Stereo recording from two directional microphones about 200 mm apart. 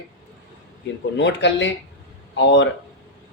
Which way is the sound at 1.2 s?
65° left (ahead or behind).